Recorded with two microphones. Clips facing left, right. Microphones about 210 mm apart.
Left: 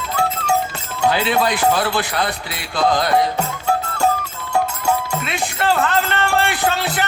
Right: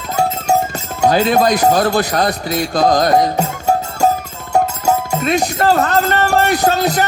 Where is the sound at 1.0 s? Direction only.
40° right (ahead or behind).